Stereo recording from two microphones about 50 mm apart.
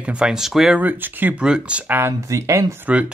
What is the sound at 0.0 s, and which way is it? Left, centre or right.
Speech, right.